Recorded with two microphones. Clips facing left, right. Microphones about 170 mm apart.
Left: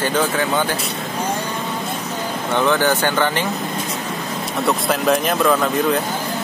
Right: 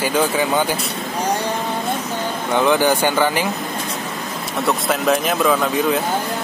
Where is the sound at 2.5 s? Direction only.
10° right (ahead or behind).